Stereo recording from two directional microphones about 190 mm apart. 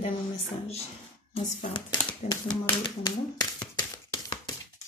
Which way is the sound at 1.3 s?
30° left (ahead or behind).